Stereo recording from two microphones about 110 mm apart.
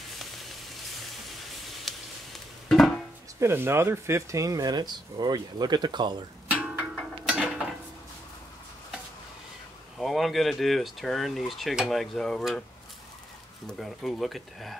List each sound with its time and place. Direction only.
1.9 s a sound: centre (ahead or behind)
3.3 s speech: 20° right (ahead or behind); by 6.1 s 45° right (ahead or behind)
6.5 s music: 15° right (ahead or behind)
7.2 s mechanisms: 10° right (ahead or behind)
9.9 s speech: centre (ahead or behind)
13.7 s speech: centre (ahead or behind)